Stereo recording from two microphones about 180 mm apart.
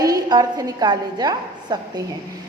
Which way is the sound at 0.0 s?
20° right (ahead or behind).